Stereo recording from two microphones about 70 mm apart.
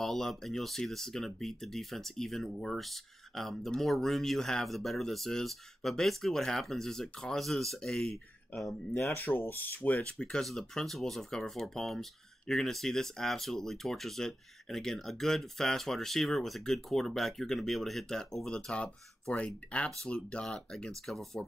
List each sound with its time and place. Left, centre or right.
0.0 s speech: centre
9.1 s speech: left
10.1 s speech: centre